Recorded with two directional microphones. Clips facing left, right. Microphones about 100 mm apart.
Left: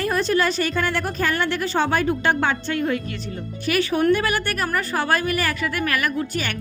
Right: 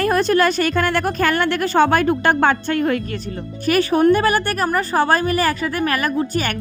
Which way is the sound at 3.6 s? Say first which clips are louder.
Right 5 dB; 45° right (ahead or behind).